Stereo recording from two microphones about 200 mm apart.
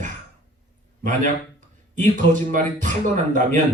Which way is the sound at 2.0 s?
40° right (ahead or behind).